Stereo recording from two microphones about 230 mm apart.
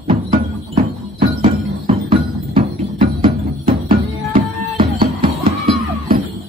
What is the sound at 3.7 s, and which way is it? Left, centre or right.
Music, right.